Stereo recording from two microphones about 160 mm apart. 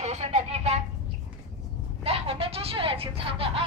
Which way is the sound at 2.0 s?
40° right (ahead or behind).